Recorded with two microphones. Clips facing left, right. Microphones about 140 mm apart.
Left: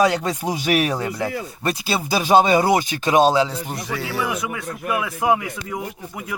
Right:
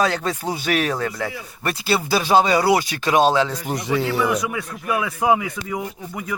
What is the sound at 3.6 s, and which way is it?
Speech, 15° right (ahead or behind).